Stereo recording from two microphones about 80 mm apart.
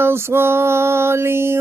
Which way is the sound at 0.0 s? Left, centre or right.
Right.